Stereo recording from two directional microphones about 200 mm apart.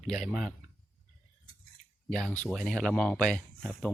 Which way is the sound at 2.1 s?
Centre (ahead or behind).